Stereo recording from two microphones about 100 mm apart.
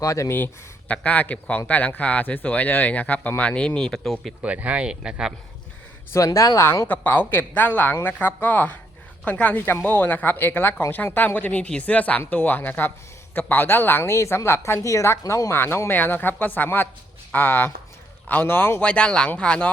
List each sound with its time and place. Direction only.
0.0 s speech: 30° left (ahead or behind)
0.3 s speech: 15° left (ahead or behind); by 4.4 s centre (ahead or behind)
4.4 s speech: 15° right (ahead or behind)
6.1 s speech: 30° left (ahead or behind); by 19.7 s 10° left (ahead or behind)